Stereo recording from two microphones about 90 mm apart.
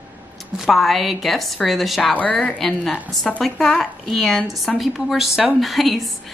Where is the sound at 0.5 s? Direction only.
Centre (ahead or behind).